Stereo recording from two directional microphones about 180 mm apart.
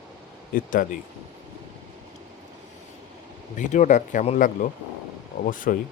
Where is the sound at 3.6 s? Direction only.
45° left (ahead or behind).